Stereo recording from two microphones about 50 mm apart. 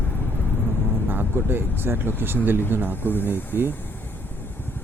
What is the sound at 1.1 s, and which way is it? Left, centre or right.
Speech, right.